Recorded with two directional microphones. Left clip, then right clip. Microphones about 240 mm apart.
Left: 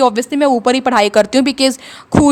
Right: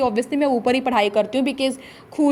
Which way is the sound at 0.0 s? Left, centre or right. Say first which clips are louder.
Left 7 dB; left.